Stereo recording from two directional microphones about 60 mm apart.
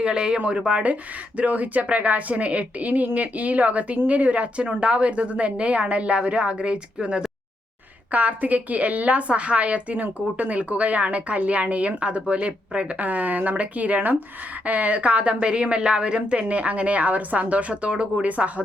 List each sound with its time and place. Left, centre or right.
0.0 s a woman's voice: centre